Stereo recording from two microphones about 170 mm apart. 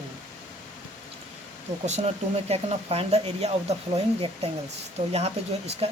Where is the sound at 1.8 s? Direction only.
40° right (ahead or behind).